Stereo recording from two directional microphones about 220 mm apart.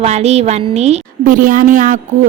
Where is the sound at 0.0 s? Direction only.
30° right (ahead or behind).